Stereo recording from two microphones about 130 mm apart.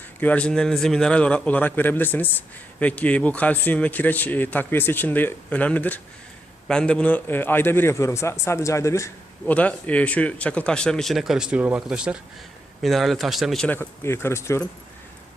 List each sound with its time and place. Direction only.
0.2 s a man's voice: 10° left (ahead or behind)
9.5 s speech: 10° left (ahead or behind)
13.7 s a man's voice: 20° left (ahead or behind)